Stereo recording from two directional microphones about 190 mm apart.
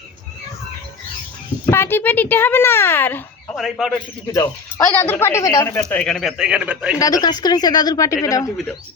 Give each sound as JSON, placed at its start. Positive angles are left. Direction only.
{"t": 1.6, "sound": "speech", "side_deg": 10}
{"t": 3.6, "sound": "speech", "side_deg": 0}
{"t": 4.9, "sound": "a woman's voice", "side_deg": 10}
{"t": 5.8, "sound": "speech", "side_deg": 5}
{"t": 7.0, "sound": "a woman's voice", "side_deg": 20}